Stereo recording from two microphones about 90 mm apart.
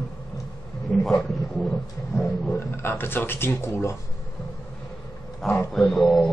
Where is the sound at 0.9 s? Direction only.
5° left (ahead or behind).